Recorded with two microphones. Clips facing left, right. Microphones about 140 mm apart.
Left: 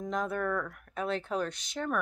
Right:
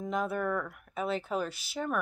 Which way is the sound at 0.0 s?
5° right (ahead or behind).